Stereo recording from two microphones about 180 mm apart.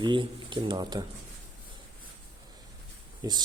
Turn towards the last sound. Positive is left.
turn(degrees=-20)  # may be behind; listen again after turning